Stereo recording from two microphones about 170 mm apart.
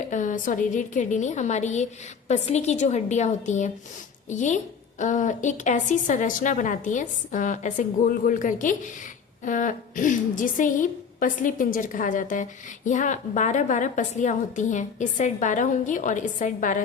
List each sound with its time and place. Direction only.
0.1 s a woman's voice: 50° left (ahead or behind)